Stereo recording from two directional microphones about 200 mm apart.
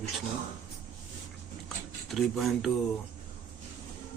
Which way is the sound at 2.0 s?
Centre (ahead or behind).